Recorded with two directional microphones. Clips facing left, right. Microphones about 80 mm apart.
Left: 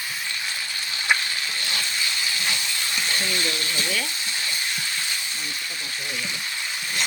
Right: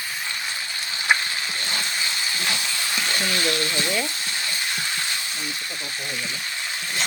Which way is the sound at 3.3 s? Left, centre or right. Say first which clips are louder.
Right 3 dB; right.